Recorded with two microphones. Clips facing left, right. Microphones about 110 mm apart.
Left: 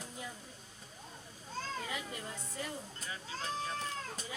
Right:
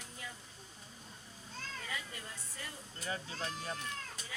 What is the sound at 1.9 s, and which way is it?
Music, 20° left (ahead or behind).